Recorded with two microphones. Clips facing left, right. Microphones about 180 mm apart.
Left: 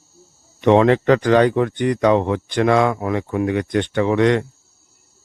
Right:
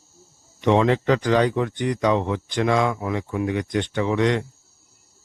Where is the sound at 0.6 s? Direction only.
60° left (ahead or behind).